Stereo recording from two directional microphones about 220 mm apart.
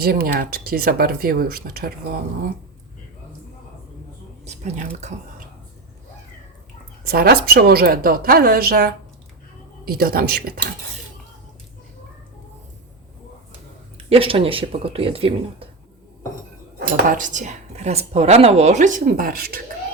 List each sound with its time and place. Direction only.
0.0 s a woman's voice: 45° right (ahead or behind)
4.4 s speech: 30° right (ahead or behind)
7.0 s a woman's voice: 45° right (ahead or behind)
14.1 s speech: 25° right (ahead or behind)
17.1 s speech: 35° right (ahead or behind)